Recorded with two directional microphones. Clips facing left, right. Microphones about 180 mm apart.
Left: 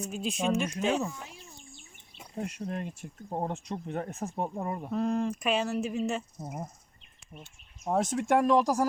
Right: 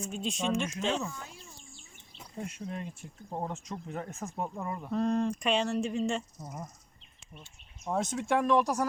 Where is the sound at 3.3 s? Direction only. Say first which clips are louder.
Left 3 dB; 35° left (ahead or behind).